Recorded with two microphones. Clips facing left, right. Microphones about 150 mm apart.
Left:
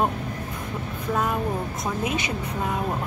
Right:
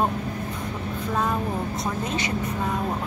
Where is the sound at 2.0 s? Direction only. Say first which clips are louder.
Left 1 dB; 10° left (ahead or behind).